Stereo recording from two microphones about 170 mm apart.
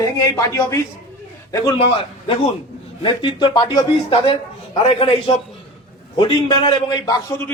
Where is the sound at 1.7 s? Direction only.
30° left (ahead or behind).